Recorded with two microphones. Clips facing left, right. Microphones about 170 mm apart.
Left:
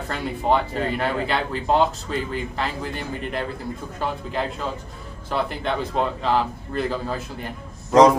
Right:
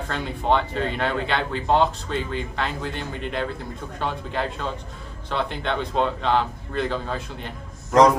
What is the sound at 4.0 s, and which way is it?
Speech, 5° left (ahead or behind).